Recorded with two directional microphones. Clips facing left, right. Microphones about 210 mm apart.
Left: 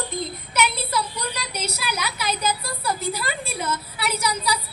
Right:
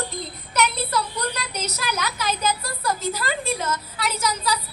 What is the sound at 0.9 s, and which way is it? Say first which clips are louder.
Speech: right 1 dB; 10° left (ahead or behind).